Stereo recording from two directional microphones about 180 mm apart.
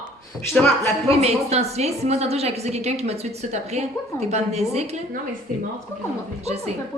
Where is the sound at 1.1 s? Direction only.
35° right (ahead or behind).